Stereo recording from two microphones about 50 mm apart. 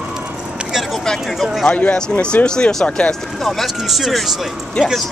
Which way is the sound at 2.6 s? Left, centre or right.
Centre.